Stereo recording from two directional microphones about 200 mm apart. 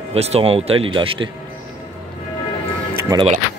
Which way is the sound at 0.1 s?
30° right (ahead or behind).